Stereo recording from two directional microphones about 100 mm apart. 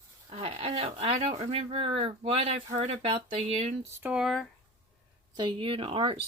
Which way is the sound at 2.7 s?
90° right.